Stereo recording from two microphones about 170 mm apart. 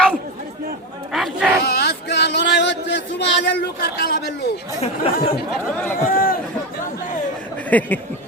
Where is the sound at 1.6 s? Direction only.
70° left (ahead or behind).